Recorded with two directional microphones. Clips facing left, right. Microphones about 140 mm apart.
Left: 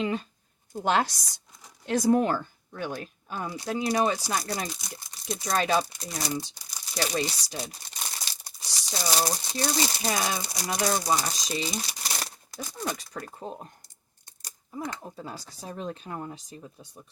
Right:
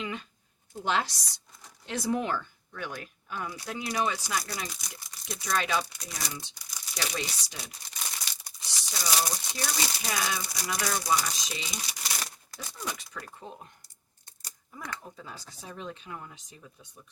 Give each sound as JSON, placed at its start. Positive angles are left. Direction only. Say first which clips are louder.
{"t": 0.0, "sound": "speech", "louder": "left 7 dB", "side_deg": 35}
{"t": 0.9, "sound": "speech", "louder": "left 4 dB", "side_deg": 45}
{"t": 12.2, "sound": "a sound", "louder": "left 4 dB", "side_deg": 40}
{"t": 13.1, "sound": "speech", "louder": "left 5 dB", "side_deg": 35}
{"t": 14.7, "sound": "speech", "louder": "left 6 dB", "side_deg": 25}